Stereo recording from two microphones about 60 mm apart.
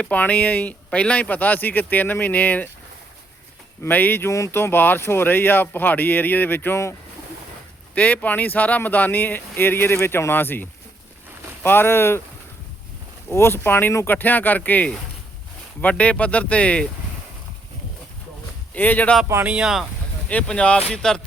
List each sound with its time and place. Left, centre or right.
0.0 s speech: left
3.8 s speech: left
4.3 s speech: left
4.5 s speech: left
7.9 s speech: left
13.3 s speech: left; by 16.9 s centre
18.7 s speech: left
19.6 s speech: centre
20.2 s speech: centre